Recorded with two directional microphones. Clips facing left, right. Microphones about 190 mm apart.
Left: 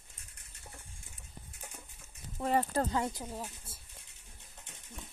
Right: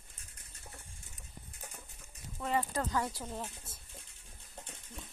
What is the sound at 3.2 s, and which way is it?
Speech, 10° left (ahead or behind).